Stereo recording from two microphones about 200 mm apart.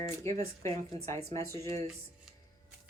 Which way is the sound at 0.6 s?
15° left (ahead or behind).